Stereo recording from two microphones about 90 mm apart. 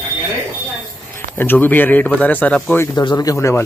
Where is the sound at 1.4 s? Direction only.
20° left (ahead or behind).